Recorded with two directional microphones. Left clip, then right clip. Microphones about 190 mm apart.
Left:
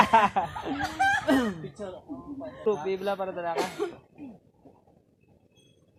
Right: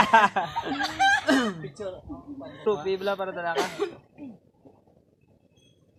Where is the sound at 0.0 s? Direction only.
15° right (ahead or behind).